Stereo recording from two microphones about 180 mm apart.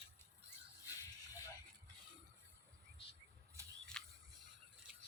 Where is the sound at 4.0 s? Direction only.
5° left (ahead or behind).